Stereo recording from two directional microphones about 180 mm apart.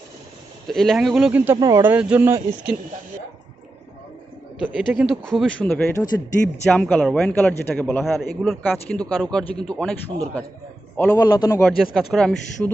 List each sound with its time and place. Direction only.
0.7 s speech: centre (ahead or behind)
4.6 s speech: centre (ahead or behind)
11.0 s speech: 20° left (ahead or behind)
11.8 s speech: centre (ahead or behind)